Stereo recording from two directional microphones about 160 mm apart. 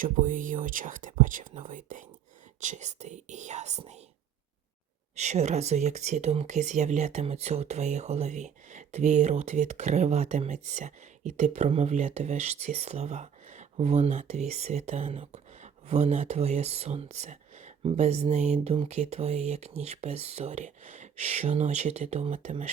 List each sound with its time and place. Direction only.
0.0 s speech: 55° right (ahead or behind)
5.1 s speech: 45° right (ahead or behind)